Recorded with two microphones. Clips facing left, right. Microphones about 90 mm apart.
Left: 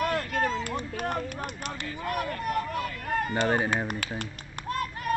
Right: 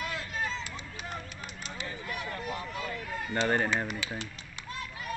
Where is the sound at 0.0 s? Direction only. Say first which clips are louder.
Left 8 dB; 55° left (ahead or behind).